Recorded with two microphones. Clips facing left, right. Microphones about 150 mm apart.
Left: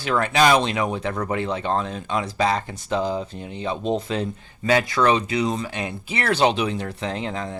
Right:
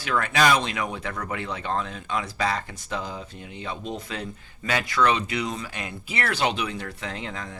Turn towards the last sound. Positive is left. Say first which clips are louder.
# left 6 dB
turn(degrees=30)  # may be behind; listen again after turning